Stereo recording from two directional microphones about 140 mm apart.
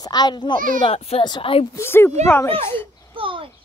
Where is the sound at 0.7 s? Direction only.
45° left (ahead or behind).